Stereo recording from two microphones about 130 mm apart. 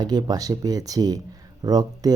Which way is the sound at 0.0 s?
30° right (ahead or behind).